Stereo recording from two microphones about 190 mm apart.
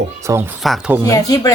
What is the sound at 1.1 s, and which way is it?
Speech, 20° left (ahead or behind).